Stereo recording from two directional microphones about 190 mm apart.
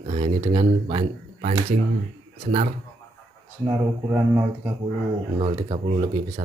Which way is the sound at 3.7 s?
15° right (ahead or behind).